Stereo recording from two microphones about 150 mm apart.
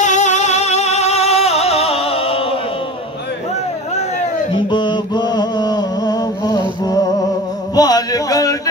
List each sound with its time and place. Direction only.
0.0 s music: 55° left (ahead or behind)
4.6 s mantra: 30° left (ahead or behind)
7.7 s a sound: 25° left (ahead or behind)